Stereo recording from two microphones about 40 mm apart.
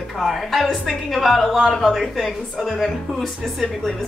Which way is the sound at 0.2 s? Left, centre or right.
Centre.